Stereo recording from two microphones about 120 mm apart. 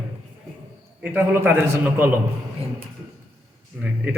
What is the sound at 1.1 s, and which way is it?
A man's voice, 20° right (ahead or behind).